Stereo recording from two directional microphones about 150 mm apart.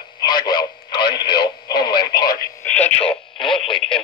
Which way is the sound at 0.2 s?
30° left (ahead or behind).